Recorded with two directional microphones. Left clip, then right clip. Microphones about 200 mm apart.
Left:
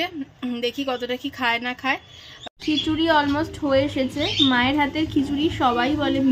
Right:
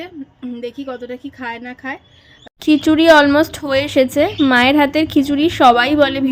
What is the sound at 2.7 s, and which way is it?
Speech, 45° right (ahead or behind).